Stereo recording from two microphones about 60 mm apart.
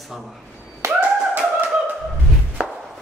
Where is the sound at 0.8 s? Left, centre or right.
Right.